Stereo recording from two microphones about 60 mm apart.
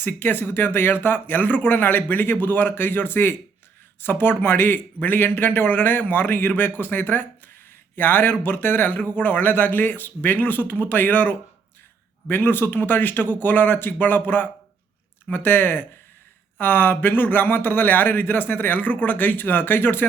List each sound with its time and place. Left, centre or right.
0.0 s speech: left